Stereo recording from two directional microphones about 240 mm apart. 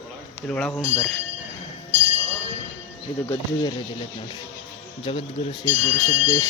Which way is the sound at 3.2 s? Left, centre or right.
Centre.